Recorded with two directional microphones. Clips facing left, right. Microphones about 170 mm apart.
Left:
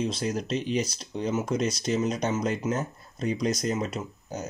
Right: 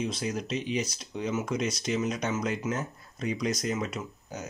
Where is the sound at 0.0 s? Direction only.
35° left (ahead or behind).